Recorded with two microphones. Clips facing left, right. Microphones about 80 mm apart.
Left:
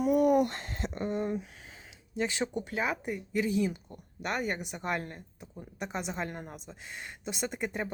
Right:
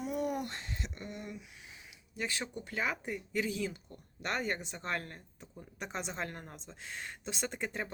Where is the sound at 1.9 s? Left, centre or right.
Left.